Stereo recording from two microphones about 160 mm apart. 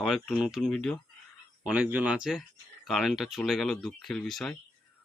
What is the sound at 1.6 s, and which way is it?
Speech, 5° right (ahead or behind).